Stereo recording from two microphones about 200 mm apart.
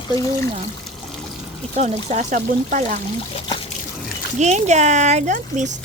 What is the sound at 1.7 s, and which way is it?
Speech, 35° right (ahead or behind).